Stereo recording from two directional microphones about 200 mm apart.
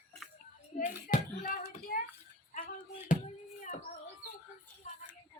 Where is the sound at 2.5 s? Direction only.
40° left (ahead or behind).